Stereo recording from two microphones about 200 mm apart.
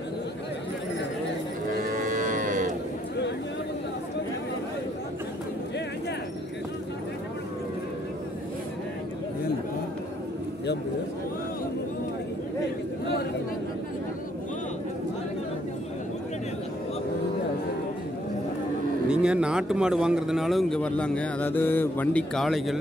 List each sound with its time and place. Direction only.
1.8 s cattle: 45° right (ahead or behind)
19.0 s speech: 5° right (ahead or behind)